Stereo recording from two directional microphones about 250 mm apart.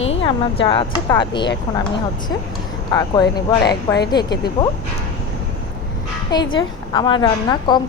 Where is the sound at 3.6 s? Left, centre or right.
Left.